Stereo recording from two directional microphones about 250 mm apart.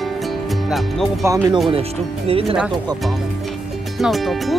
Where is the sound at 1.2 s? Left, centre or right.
Centre.